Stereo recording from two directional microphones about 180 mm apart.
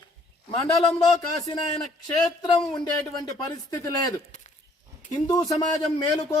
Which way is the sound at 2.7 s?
20° left (ahead or behind).